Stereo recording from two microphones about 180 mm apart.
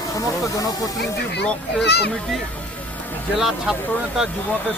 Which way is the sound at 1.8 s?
65° left (ahead or behind).